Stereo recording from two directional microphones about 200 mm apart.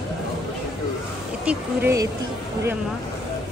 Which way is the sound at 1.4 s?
15° right (ahead or behind).